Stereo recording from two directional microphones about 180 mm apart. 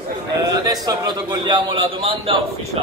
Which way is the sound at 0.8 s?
25° right (ahead or behind).